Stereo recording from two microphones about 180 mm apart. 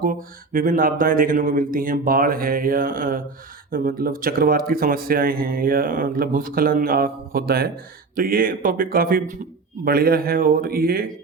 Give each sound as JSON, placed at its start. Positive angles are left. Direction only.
{"t": 0.0, "sound": "speech", "side_deg": -50}